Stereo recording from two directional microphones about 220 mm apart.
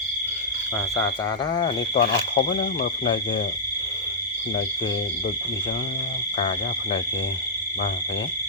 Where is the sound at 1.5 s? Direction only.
20° left (ahead or behind).